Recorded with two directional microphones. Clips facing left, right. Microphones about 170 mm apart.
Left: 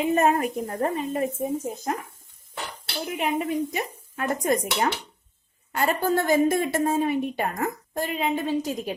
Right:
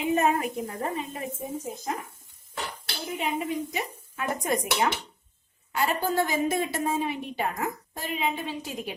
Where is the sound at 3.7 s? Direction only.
50° left (ahead or behind).